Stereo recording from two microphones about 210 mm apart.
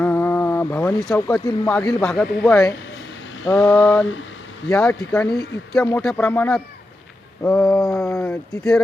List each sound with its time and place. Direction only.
0.0 s a sound: 10° left (ahead or behind)
1.5 s speech: 15° left (ahead or behind)
2.0 s speech: 5° left (ahead or behind)